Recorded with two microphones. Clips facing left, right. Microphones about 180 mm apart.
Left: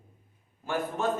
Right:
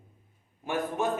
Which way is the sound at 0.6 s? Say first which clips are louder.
Right 1 dB; 15° right (ahead or behind).